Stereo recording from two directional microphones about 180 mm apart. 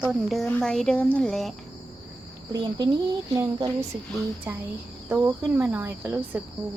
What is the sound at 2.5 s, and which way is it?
Speech, 20° right (ahead or behind).